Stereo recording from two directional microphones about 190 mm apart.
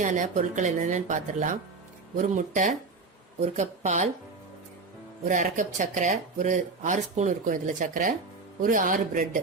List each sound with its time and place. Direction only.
0.0 s speech: 40° right (ahead or behind)
5.3 s speech: 45° right (ahead or behind)